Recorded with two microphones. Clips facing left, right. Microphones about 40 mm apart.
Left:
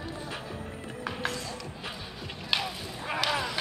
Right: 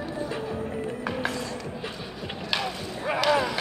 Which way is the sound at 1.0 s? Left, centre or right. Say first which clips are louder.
Right 1 dB; centre.